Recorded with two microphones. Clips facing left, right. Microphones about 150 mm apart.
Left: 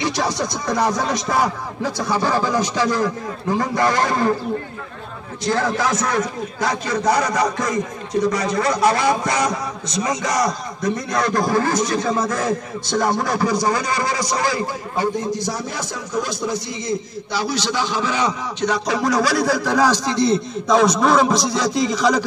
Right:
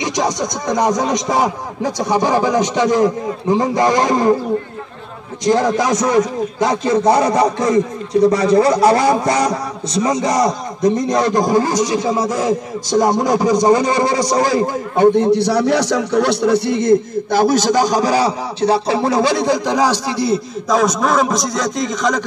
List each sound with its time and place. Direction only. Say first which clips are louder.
0.0 s a man's voice: right 3 dB; 15° right (ahead or behind)
5.4 s a man's voice: right 6 dB; 15° right (ahead or behind); by 14.6 s 40° right (ahead or behind)
15.0 s a man's voice: right 11 dB; 65° right (ahead or behind); by 22.2 s 5° left (ahead or behind)